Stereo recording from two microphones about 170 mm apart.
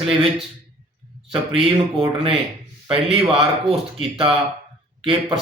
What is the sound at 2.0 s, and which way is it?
Speech, 30° right (ahead or behind).